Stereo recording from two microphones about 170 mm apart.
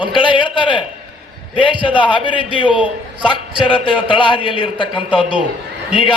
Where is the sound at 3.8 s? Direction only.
30° left (ahead or behind).